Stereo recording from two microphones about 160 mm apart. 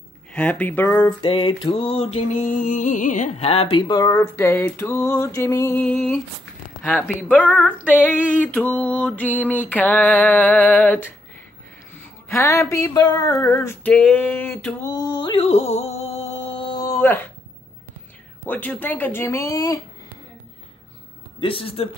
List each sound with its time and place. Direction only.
0.3 s female singing: 10° left (ahead or behind)
1.0 s mantra: 30° left (ahead or behind)
4.1 s female singing: 15° left (ahead or behind)
7.2 s female singing: 10° left (ahead or behind)
12.3 s a sound: 15° left (ahead or behind); by 16.8 s 35° left (ahead or behind)
16.8 s a sound: 15° left (ahead or behind)
18.5 s female singing: 10° left (ahead or behind)
21.4 s mantra: 35° left (ahead or behind)